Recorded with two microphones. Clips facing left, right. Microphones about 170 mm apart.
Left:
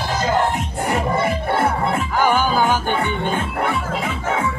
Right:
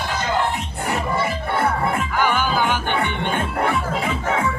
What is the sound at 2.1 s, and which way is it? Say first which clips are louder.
Music: left 5 dB; 40° left (ahead or behind).